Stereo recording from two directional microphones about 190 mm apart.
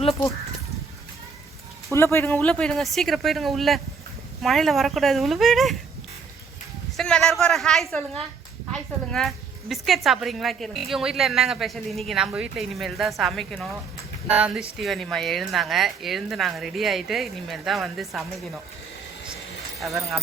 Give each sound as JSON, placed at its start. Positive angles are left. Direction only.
{"t": 1.9, "sound": "a woman's voice", "side_deg": 15}
{"t": 6.9, "sound": "a sound", "side_deg": 0}
{"t": 8.7, "sound": "a woman's voice", "side_deg": 0}
{"t": 19.8, "sound": "a woman's voice", "side_deg": 0}